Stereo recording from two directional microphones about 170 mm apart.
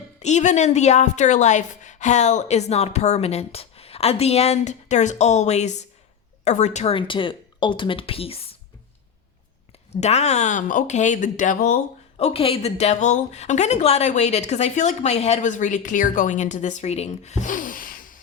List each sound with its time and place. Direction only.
0.2 s a woman's voice: 45° left (ahead or behind)
9.9 s a woman's voice: 40° left (ahead or behind)
12.1 s a woman's voice: 35° left (ahead or behind); by 18.2 s 55° left (ahead or behind)